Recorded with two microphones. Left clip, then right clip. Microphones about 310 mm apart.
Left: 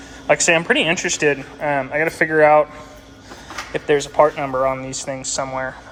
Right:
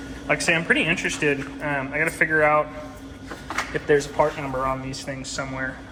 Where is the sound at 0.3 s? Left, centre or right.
Left.